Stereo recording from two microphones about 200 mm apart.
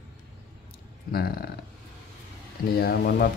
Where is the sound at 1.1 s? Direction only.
50° left (ahead or behind).